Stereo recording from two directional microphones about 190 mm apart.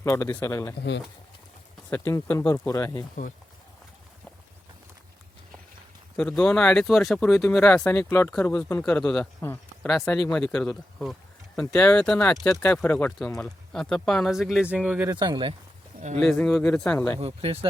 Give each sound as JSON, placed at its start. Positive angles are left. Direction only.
{"t": 0.0, "sound": "speech", "side_deg": 15}
{"t": 0.8, "sound": "speech", "side_deg": 65}
{"t": 1.9, "sound": "speech", "side_deg": 10}
{"t": 6.1, "sound": "speech", "side_deg": 5}
{"t": 15.1, "sound": "speech", "side_deg": -25}
{"t": 16.0, "sound": "speech", "side_deg": -40}
{"t": 16.2, "sound": "speech", "side_deg": 5}
{"t": 17.2, "sound": "speech", "side_deg": -30}